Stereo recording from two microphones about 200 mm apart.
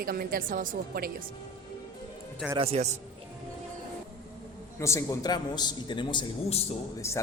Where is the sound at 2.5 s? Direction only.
30° right (ahead or behind).